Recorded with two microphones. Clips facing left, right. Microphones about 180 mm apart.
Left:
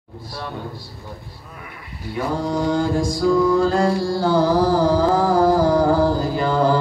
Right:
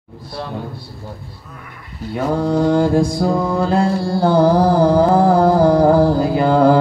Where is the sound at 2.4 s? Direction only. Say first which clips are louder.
Right 6 dB; 55° right (ahead or behind).